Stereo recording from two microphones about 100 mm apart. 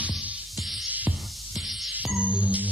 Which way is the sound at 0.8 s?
15° right (ahead or behind).